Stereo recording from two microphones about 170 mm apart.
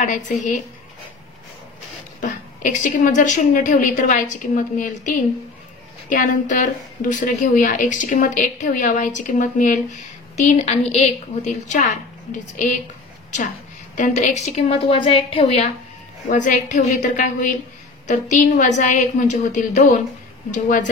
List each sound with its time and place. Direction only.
0.0 s a woman's voice: 45° left (ahead or behind)
2.2 s a woman's voice: 50° left (ahead or behind)
13.9 s a woman's voice: 45° left (ahead or behind)